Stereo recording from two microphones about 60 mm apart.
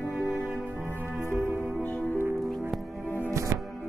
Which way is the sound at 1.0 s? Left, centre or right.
Left.